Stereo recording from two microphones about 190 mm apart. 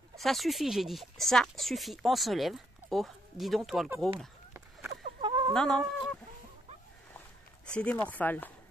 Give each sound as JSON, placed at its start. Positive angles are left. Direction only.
{"t": 0.2, "sound": "speech", "side_deg": 0}
{"t": 5.2, "sound": "chicken", "side_deg": -25}
{"t": 5.5, "sound": "chicken", "side_deg": 0}
{"t": 7.2, "sound": "a sound", "side_deg": 5}
{"t": 8.1, "sound": "chopping", "side_deg": 10}